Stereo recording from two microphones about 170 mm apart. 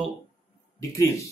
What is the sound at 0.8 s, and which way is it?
Speech, 20° left (ahead or behind).